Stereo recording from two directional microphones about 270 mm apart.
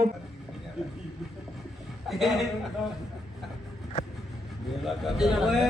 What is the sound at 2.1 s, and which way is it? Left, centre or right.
Speech, centre.